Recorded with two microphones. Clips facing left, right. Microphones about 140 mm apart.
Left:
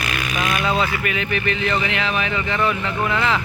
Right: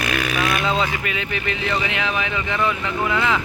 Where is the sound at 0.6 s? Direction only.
20° right (ahead or behind).